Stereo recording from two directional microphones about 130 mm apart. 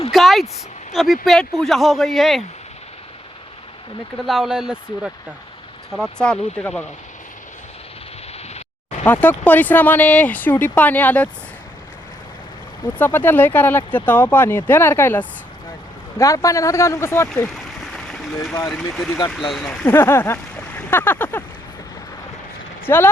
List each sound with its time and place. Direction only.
0.1 s vehicle: centre (ahead or behind)
0.9 s speech: centre (ahead or behind)
4.3 s speech: 5° right (ahead or behind)
5.9 s speech: 5° left (ahead or behind)
9.0 s speech: 15° left (ahead or behind)
12.8 s speech: 15° left (ahead or behind)
17.5 s a sound: 5° left (ahead or behind)
18.7 s speech: 5° left (ahead or behind)
19.8 s speech: 20° left (ahead or behind)
22.9 s speech: 20° left (ahead or behind)